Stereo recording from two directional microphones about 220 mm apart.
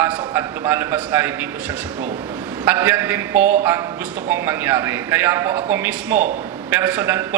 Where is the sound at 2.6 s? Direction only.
10° right (ahead or behind).